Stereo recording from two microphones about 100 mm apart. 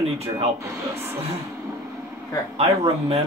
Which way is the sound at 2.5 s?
90° right.